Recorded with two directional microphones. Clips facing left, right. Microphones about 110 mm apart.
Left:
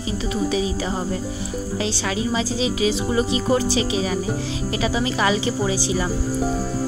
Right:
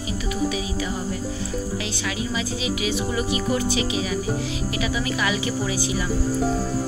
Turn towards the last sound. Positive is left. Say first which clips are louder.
# left 3 dB
turn(degrees=30)  # may be behind; listen again after turning